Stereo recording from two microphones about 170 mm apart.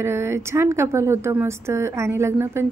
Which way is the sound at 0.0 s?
15° right (ahead or behind).